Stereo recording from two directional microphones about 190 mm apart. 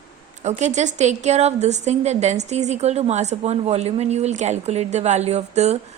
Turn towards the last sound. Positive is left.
turn(degrees=-35)  # may be behind; listen again after turning